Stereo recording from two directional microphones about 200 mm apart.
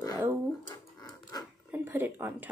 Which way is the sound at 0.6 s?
20° left (ahead or behind).